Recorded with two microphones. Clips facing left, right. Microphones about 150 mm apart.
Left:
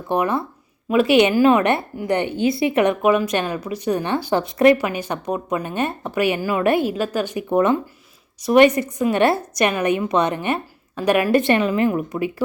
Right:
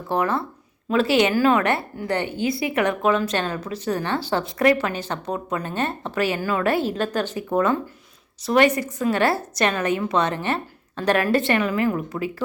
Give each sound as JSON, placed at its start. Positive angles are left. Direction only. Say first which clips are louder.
{"t": 0.1, "sound": "a woman's voice", "louder": "left 2 dB", "side_deg": 15}